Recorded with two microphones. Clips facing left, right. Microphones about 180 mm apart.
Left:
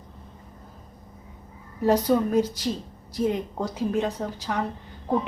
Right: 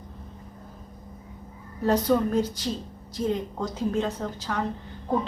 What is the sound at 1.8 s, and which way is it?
Speech, 10° left (ahead or behind).